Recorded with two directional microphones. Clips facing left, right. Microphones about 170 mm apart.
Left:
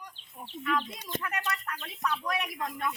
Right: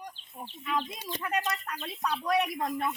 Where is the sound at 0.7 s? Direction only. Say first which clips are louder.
Right 1 dB; 10° right (ahead or behind).